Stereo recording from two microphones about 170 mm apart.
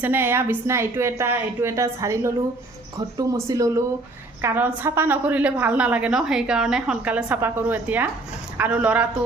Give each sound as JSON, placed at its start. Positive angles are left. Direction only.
{"t": 0.0, "sound": "a woman's voice", "side_deg": -10}